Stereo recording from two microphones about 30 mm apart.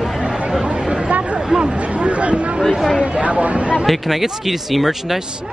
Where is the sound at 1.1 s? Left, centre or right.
Right.